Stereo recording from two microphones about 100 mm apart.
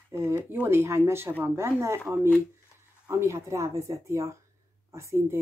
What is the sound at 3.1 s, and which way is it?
Speech, 25° right (ahead or behind).